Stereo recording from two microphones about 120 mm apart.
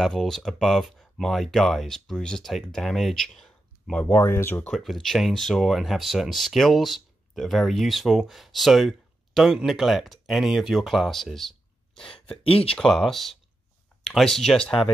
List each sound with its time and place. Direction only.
0.0 s speech: centre (ahead or behind); by 4.6 s 20° left (ahead or behind)
4.6 s speech: centre (ahead or behind)
12.4 s speech: 50° left (ahead or behind)
12.7 s speech: centre (ahead or behind)